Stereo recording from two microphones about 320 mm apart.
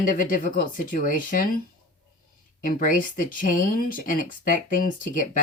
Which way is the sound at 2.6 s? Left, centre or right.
Left.